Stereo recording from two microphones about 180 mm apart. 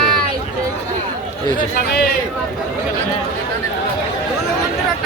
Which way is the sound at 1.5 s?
60° left (ahead or behind).